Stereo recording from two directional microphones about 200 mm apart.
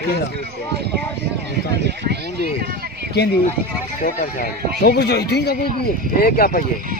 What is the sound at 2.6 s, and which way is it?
Run, 50° right (ahead or behind).